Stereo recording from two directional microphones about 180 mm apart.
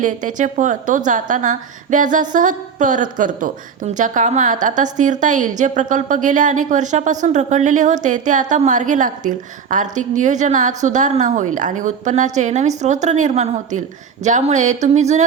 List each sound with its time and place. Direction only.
0.0 s a woman's voice: 45° right (ahead or behind)